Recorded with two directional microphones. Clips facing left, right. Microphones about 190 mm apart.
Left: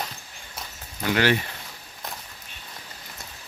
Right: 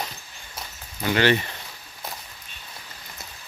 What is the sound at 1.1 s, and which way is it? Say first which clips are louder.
Speech: right 2 dB; 5° left (ahead or behind).